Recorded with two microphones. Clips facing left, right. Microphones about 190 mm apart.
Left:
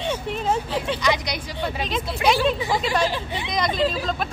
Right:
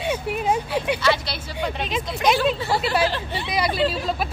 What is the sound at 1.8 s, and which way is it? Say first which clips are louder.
Speech: even; centre (ahead or behind).